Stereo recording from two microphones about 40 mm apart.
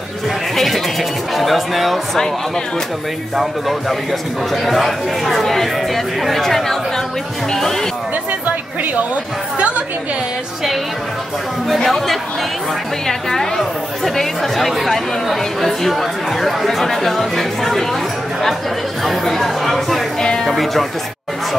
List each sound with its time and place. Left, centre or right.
0.6 s speech: centre
3.3 s speech: centre
8.3 s chatter: right
11.7 s speech: centre
19.0 s speech: centre
20.2 s speech: centre
20.4 s speech: centre